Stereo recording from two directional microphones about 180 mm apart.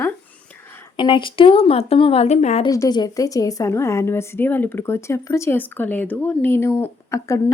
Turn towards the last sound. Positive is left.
turn(degrees=15)  # may be behind; listen again after turning